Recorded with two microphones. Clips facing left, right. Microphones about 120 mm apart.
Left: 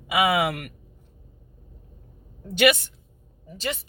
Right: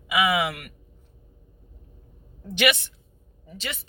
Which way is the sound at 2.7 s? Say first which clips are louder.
Left 4 dB; 45° left (ahead or behind).